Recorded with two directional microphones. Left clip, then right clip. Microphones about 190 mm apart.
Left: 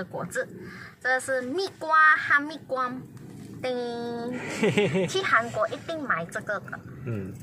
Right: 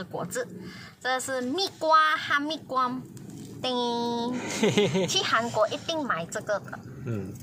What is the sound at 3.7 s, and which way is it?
Speech, 10° right (ahead or behind).